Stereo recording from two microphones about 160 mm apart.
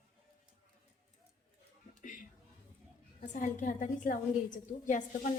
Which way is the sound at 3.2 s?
50° left (ahead or behind).